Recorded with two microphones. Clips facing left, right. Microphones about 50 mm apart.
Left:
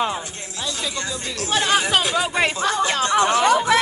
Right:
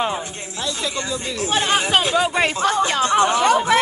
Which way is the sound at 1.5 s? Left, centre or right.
Right.